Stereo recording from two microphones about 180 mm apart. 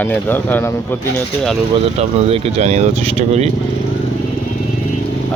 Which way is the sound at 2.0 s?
40° right (ahead or behind).